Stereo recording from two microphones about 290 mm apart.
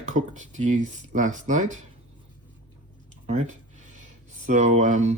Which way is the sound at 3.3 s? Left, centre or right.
Right.